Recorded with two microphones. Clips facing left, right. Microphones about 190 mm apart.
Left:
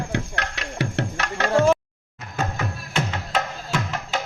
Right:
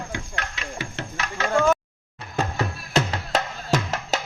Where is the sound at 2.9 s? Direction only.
40° right (ahead or behind).